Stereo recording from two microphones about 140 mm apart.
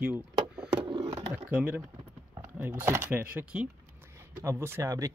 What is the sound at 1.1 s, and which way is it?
Bird, 15° right (ahead or behind).